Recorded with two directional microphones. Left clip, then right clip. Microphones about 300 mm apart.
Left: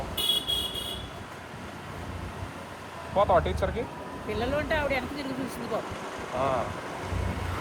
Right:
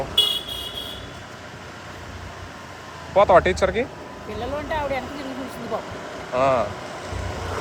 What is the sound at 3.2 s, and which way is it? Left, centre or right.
Speech, right.